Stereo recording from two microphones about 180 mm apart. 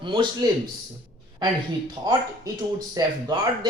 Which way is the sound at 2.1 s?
20° right (ahead or behind).